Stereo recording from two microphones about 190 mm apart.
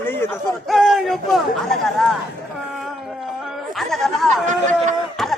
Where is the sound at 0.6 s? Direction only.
Centre (ahead or behind).